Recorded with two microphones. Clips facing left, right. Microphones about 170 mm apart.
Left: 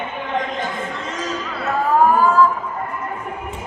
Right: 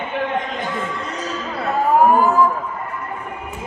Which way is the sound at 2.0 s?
20° right (ahead or behind).